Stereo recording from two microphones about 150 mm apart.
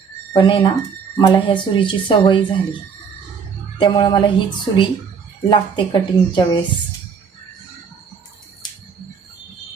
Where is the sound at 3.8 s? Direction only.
30° left (ahead or behind).